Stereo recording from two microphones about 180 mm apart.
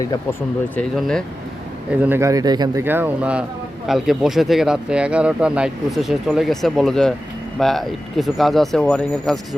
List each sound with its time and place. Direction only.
0.8 s speech: 5° left (ahead or behind)
2.0 s speech: 10° right (ahead or behind)
2.8 s speech: 10° right (ahead or behind)